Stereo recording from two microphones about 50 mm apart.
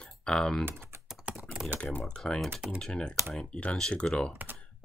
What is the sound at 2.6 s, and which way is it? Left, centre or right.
Speech, centre.